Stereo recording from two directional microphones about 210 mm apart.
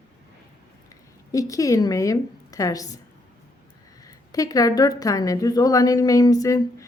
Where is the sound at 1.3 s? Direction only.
15° left (ahead or behind).